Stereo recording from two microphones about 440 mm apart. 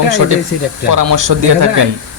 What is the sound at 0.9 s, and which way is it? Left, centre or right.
Speech, right.